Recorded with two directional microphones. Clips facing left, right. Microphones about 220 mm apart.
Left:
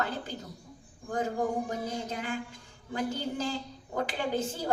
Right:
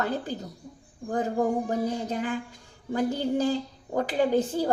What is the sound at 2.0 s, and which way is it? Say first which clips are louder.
A woman's voice: right 5 dB; 35° right (ahead or behind).